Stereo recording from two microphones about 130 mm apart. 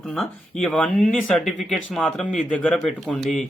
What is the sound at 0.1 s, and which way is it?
Speech, 5° left (ahead or behind).